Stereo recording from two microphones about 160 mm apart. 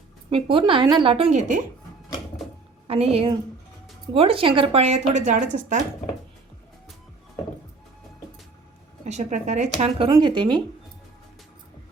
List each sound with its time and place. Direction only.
0.3 s speech: 35° right (ahead or behind); by 1.6 s 50° right (ahead or behind)
2.8 s a woman's voice: 40° right (ahead or behind)
9.0 s speech: 45° right (ahead or behind)
10.1 s speech: 30° right (ahead or behind)